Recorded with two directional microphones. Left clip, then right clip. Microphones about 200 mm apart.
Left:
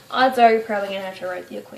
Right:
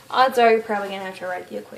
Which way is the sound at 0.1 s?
45° right (ahead or behind).